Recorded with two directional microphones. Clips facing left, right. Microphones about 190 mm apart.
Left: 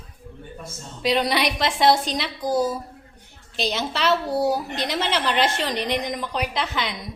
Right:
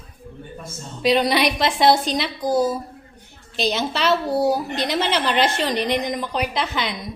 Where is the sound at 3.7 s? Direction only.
15° right (ahead or behind).